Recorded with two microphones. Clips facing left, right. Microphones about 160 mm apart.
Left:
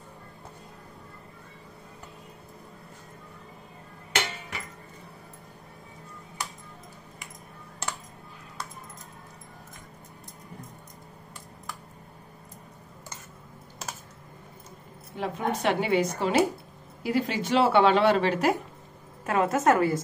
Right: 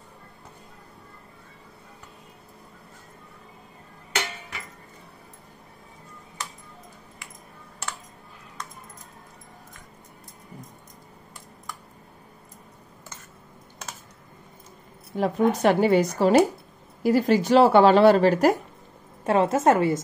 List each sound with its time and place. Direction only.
15.1 s speech: 40° right (ahead or behind)
19.2 s a woman's voice: 30° right (ahead or behind)